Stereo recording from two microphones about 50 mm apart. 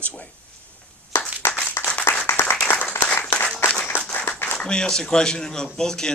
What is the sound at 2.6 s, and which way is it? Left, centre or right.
Applause, left.